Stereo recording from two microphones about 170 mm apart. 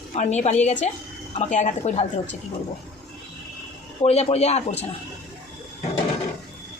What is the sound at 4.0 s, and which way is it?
Speech, 40° left (ahead or behind).